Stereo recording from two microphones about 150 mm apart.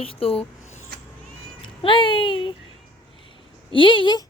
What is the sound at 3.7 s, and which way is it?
Speech, 35° left (ahead or behind).